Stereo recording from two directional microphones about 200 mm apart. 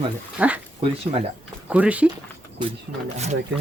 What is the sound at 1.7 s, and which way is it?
Speech, 5° right (ahead or behind).